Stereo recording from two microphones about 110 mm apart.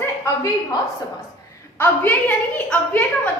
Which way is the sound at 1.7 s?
20° left (ahead or behind).